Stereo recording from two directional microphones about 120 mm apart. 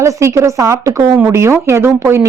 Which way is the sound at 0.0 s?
25° right (ahead or behind).